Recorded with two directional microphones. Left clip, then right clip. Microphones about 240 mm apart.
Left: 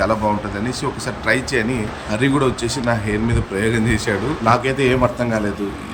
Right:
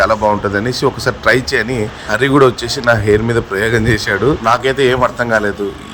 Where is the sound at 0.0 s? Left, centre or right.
Centre.